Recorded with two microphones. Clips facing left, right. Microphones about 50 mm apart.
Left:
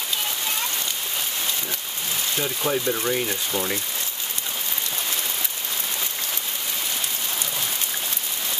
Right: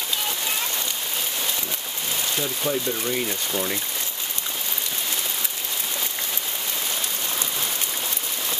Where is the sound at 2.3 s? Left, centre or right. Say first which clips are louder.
Left 2 dB; centre.